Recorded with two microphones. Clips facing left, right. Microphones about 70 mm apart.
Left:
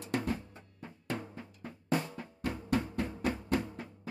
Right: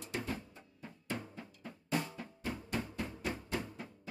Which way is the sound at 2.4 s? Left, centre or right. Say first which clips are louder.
Left 7 dB; left.